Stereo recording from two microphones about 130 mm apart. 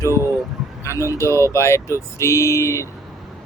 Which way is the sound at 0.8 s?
20° left (ahead or behind).